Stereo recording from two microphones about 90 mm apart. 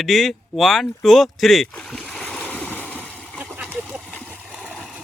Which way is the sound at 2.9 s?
20° right (ahead or behind).